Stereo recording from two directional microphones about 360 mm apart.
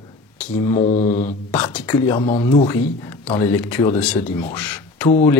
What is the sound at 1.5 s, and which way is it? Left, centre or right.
Speech, centre.